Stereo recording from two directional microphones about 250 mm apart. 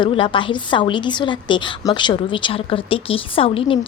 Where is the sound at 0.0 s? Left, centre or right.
Centre.